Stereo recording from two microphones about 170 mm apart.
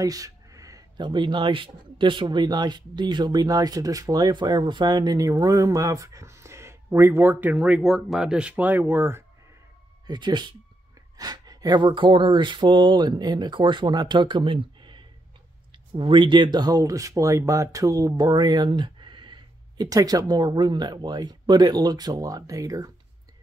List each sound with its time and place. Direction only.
0.0 s speech: 20° right (ahead or behind)
10.0 s speech: 25° right (ahead or behind)